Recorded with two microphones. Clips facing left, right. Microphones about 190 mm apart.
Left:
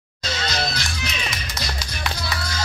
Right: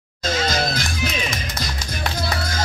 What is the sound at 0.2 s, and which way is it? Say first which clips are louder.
Music: right 5 dB; 50° right (ahead or behind).